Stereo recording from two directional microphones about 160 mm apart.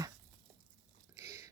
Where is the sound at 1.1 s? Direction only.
20° right (ahead or behind).